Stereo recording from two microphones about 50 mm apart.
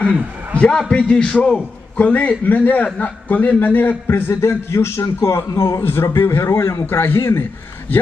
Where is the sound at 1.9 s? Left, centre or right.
Left.